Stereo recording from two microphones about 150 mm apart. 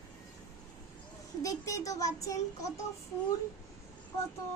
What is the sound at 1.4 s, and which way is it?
Speech, 20° left (ahead or behind).